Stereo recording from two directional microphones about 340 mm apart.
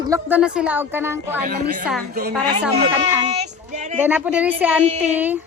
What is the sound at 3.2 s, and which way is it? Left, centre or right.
Child singing, centre.